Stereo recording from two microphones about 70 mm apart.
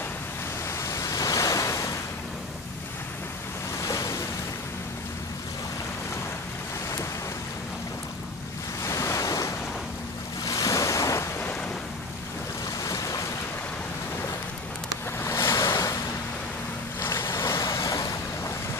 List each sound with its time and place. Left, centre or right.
0.8 s waves: left
3.8 s waves: left
8.8 s waves: left
12.8 s boat: left
15.2 s waves: left
15.6 s waves: left
17.0 s waves: left